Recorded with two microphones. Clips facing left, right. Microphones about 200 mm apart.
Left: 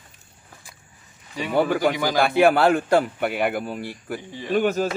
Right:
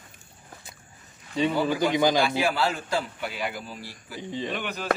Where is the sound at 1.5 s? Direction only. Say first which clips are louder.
Left 5 dB; 65° left (ahead or behind).